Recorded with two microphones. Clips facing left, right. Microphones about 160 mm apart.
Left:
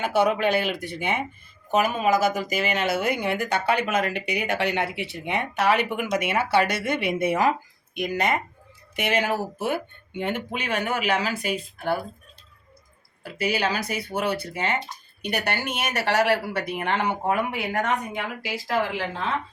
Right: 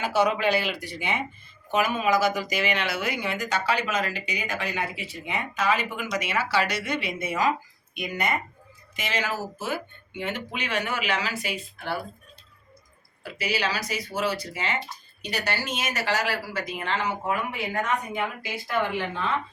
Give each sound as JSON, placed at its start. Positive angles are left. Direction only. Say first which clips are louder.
{"t": 0.0, "sound": "speech", "louder": "left 2 dB", "side_deg": 55}
{"t": 1.7, "sound": "speech", "louder": "left 2 dB", "side_deg": 40}
{"t": 9.0, "sound": "speech", "louder": "left 5 dB", "side_deg": 60}
{"t": 13.2, "sound": "speech", "louder": "left 3 dB", "side_deg": 55}
{"t": 18.4, "sound": "speech", "louder": "left 5 dB", "side_deg": 85}